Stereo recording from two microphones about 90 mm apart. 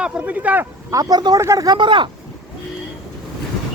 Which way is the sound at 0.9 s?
50° right (ahead or behind).